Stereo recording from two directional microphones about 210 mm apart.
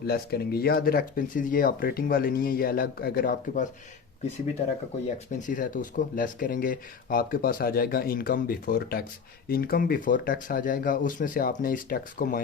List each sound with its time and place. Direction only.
0.1 s speech: 50° left (ahead or behind)
5.0 s speech: 35° left (ahead or behind)